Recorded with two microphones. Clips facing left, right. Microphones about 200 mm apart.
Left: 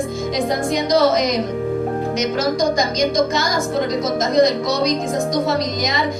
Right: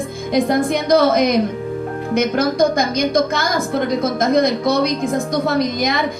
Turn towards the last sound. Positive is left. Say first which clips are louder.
# right 3 dB
turn(degrees=-55)  # may be behind; listen again after turning